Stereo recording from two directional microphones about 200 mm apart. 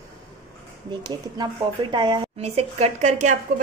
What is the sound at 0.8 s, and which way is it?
A woman's voice, 20° right (ahead or behind).